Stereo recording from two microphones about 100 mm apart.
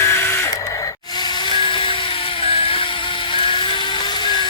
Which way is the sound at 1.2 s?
45° left (ahead or behind).